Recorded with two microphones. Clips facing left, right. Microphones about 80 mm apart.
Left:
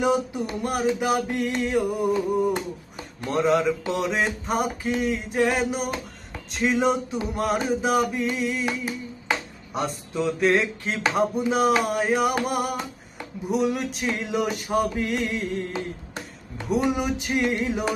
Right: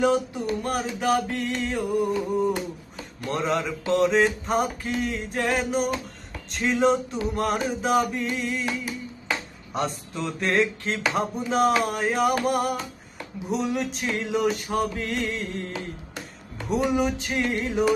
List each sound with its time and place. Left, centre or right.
0.0 s music: centre
3.2 s music: centre
9.7 s music: centre
15.7 s music: left
16.6 s music: centre
17.0 s music: centre
17.6 s music: centre